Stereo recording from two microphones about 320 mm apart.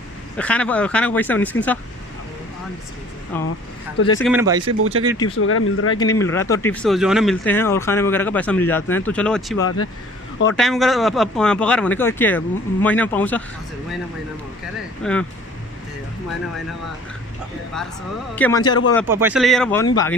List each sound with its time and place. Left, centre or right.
0.4 s speech: centre
3.3 s speech: centre
4.2 s speech: centre
4.7 s speech: right
5.4 s speech: left
5.9 s speech: centre
9.6 s speech: left
10.5 s speech: centre
15.0 s speech: centre
18.3 s speech: centre
19.0 s speech: centre